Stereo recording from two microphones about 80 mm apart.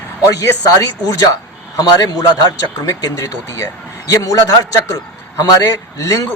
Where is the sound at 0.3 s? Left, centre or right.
Left.